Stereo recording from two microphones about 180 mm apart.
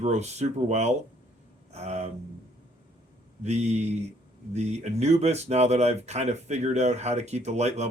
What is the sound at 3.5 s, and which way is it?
Speech, 40° right (ahead or behind).